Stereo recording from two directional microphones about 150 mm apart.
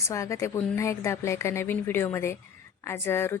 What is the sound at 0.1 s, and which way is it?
A woman's voice, 20° left (ahead or behind).